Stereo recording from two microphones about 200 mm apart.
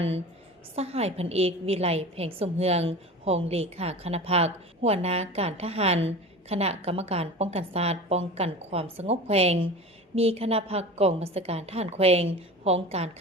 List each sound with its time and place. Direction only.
0.8 s a woman's voice: 30° right (ahead or behind)